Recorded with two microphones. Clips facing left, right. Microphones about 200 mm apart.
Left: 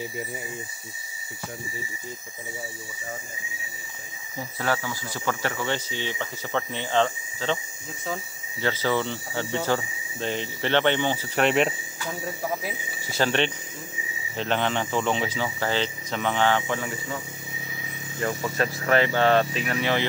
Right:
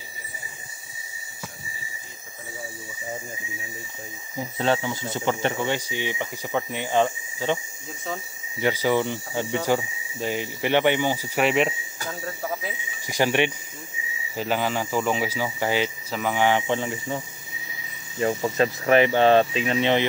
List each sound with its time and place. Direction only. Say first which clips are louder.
4.4 s speech: right 4 dB; 20° right (ahead or behind)
8.5 s speech: right 3 dB; 15° right (ahead or behind)
13.0 s speech: right 2 dB; 15° right (ahead or behind)
18.2 s speech: right 4 dB; 20° right (ahead or behind)